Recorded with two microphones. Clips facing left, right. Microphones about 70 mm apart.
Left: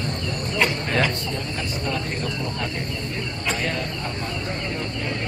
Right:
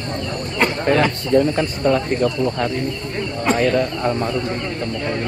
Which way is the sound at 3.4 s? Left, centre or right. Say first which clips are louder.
Right 11 dB; right.